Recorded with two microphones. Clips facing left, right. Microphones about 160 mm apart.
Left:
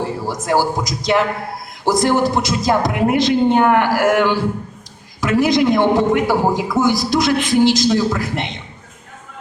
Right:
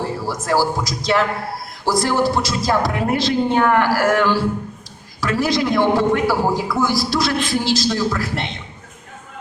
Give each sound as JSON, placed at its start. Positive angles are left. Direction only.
{"t": 0.3, "sound": "a man's voice", "side_deg": 20}